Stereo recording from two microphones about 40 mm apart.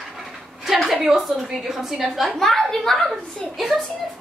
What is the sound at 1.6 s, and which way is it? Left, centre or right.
A woman's voice, centre.